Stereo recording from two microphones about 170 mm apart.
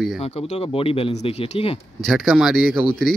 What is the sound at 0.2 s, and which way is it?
Speech, 35° left (ahead or behind).